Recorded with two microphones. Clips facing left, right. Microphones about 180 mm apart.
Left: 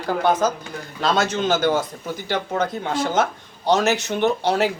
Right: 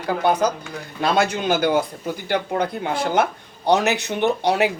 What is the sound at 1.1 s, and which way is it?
Speech, 15° right (ahead or behind).